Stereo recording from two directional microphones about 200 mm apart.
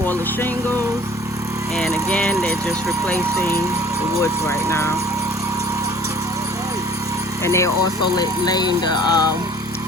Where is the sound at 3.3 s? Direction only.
15° right (ahead or behind).